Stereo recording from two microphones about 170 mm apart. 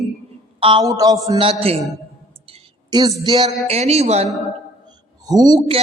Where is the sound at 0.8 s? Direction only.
20° right (ahead or behind).